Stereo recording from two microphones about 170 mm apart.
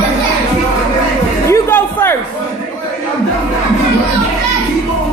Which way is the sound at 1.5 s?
15° left (ahead or behind).